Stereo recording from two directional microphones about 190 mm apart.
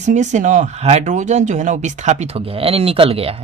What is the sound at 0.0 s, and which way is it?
Speech, 40° right (ahead or behind).